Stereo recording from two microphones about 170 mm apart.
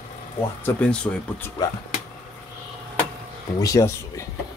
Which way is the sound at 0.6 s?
5° left (ahead or behind).